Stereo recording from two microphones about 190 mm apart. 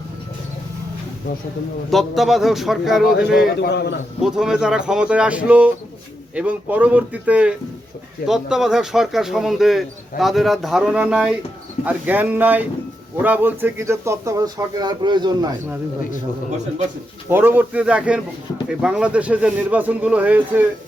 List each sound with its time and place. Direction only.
1.9 s speech: centre (ahead or behind)
3.6 s a man's voice: 60° left (ahead or behind)
4.2 s speech: 5° right (ahead or behind); by 15.5 s 20° right (ahead or behind)
17.2 s speech: 10° right (ahead or behind)